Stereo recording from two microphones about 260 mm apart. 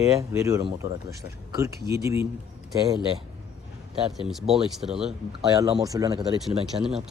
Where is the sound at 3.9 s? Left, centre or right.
Centre.